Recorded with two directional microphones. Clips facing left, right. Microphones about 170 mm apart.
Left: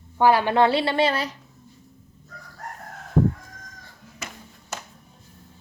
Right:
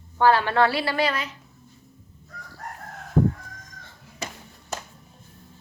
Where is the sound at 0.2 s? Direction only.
15° left (ahead or behind).